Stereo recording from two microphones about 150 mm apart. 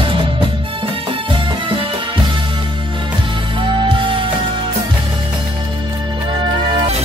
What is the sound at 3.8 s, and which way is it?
Music, 35° right (ahead or behind).